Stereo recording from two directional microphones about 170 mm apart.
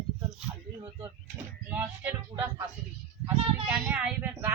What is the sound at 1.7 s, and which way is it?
Speech, 10° right (ahead or behind).